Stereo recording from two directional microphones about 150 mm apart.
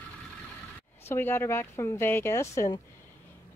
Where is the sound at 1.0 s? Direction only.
15° left (ahead or behind).